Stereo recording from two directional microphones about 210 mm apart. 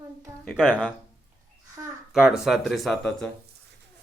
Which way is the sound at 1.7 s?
5° right (ahead or behind).